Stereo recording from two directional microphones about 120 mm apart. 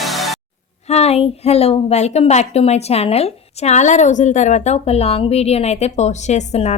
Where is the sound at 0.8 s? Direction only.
65° left (ahead or behind).